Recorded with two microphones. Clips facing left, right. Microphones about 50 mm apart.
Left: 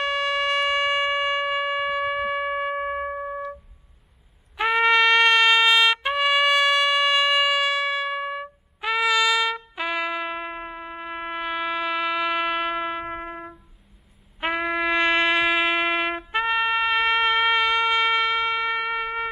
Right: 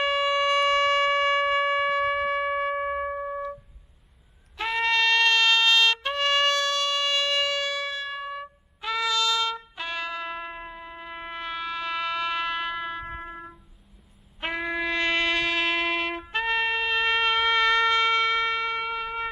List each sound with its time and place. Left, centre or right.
0.0 s siren: centre
4.6 s trumpet: centre
13.0 s music: left
14.4 s music: centre